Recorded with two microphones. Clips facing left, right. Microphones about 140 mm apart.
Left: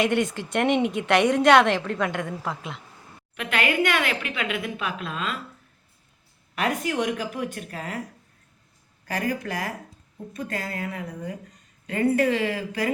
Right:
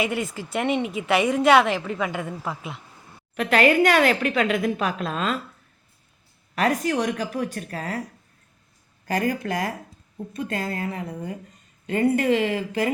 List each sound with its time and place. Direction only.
0.0 s a woman's voice: 5° right (ahead or behind)
3.3 s a woman's voice: 35° right (ahead or behind)
6.6 s a woman's voice: 40° right (ahead or behind)
9.1 s a woman's voice: 35° right (ahead or behind)